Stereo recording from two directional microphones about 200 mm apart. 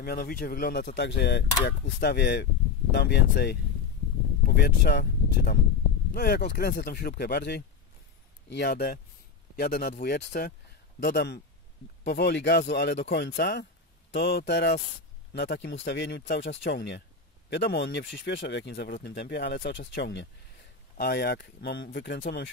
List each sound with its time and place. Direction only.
0.0 s speech: 50° left (ahead or behind)